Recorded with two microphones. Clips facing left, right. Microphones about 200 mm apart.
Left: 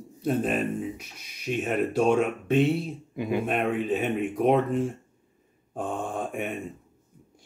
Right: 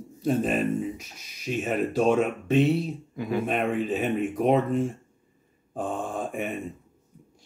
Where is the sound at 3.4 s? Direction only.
Centre (ahead or behind).